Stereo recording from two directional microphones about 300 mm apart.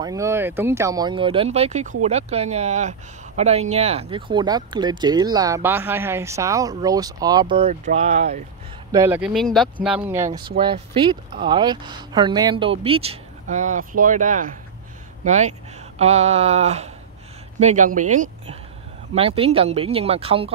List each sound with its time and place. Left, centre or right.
0.0 s speech: centre
8.9 s speech: centre